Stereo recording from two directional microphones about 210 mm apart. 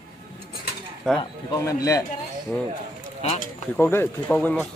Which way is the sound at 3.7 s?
10° left (ahead or behind).